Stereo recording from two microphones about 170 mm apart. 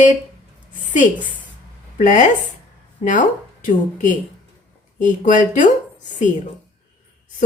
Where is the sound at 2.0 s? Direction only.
50° left (ahead or behind).